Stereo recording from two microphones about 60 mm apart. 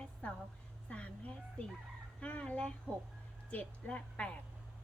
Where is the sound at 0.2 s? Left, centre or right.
Left.